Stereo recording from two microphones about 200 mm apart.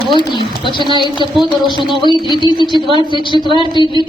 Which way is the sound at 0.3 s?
25° left (ahead or behind).